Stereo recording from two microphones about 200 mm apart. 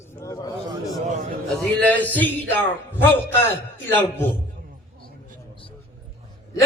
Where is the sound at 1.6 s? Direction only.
5° left (ahead or behind).